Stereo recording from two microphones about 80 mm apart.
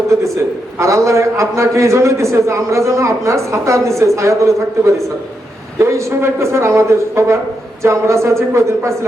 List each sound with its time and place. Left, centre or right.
0.8 s a man's voice: right